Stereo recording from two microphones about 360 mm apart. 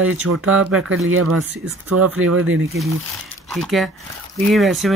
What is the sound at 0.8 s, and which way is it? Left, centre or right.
Speech, right.